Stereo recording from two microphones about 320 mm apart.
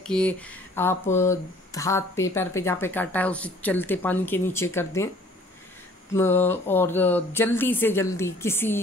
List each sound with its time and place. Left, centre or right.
0.0 s speech: centre
6.1 s speech: centre